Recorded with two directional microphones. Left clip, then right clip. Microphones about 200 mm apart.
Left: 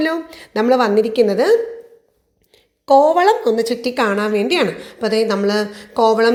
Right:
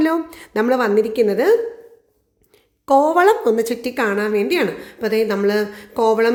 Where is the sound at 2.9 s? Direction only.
15° right (ahead or behind).